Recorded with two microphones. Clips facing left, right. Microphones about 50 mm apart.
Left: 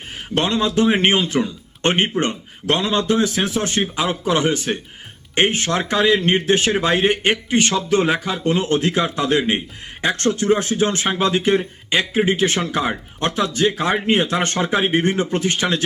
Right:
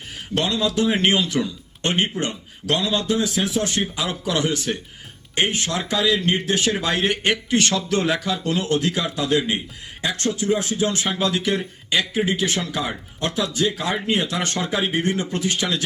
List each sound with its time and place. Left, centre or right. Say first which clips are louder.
0.3 s a man's voice: left 3 dB; left